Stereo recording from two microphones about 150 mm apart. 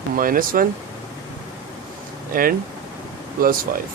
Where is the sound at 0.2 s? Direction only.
70° right (ahead or behind).